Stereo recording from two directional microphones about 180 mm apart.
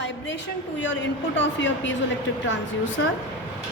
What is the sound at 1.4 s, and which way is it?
Speech, 90° left.